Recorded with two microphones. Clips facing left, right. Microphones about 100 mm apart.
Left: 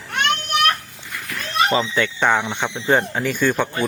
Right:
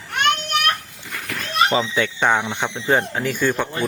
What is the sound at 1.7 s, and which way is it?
Speech, 5° right (ahead or behind).